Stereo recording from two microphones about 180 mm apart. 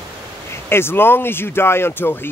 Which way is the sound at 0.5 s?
15° left (ahead or behind).